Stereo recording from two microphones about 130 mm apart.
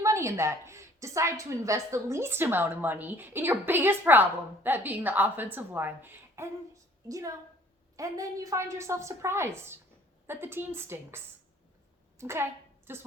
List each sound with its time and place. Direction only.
0.0 s a woman's voice: 20° right (ahead or behind)
7.9 s a woman's voice: 25° right (ahead or behind)
12.2 s a woman's voice: 20° right (ahead or behind)